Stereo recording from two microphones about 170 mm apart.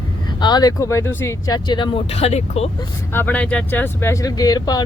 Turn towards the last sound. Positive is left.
turn(degrees=25)  # may be behind; listen again after turning